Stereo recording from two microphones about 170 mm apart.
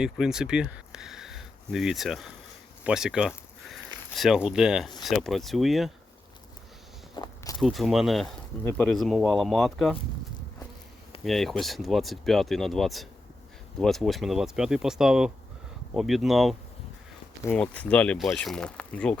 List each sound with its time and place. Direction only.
0.0 s speech: 5° right (ahead or behind)
2.8 s a sound: 5° right (ahead or behind)
4.4 s speech: 5° right (ahead or behind)
7.2 s walk: 25° left (ahead or behind)
7.6 s speech: centre (ahead or behind)
11.2 s speech: centre (ahead or behind)